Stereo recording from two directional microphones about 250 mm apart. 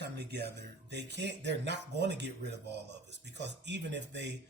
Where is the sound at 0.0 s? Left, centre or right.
Right.